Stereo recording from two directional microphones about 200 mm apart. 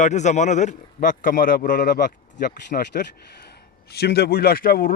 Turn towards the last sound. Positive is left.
turn(degrees=50)  # may be behind; listen again after turning